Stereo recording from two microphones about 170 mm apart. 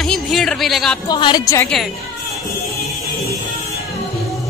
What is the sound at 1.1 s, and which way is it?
Speech, 25° left (ahead or behind).